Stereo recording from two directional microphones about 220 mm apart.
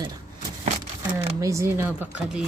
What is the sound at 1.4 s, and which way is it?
Speech, 15° right (ahead or behind).